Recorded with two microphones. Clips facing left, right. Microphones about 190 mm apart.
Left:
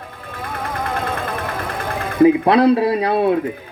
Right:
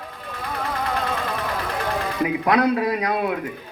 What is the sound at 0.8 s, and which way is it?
Music, 50° left (ahead or behind).